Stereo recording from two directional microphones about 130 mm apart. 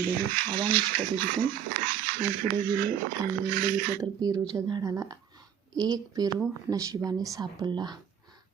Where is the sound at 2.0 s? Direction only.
90° right.